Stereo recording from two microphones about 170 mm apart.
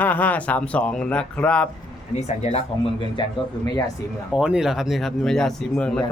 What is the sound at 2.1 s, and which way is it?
Speech, 40° left (ahead or behind).